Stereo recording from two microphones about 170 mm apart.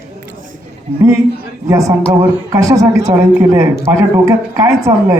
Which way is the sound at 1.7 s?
20° right (ahead or behind).